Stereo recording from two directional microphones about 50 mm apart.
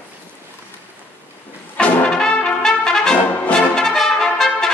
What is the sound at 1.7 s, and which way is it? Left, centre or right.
Brass instrument, centre.